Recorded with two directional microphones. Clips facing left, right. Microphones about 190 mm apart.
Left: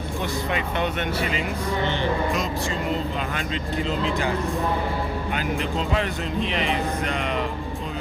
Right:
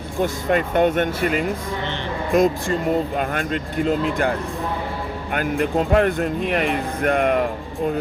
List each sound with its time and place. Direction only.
0.2 s speech: 45° right (ahead or behind)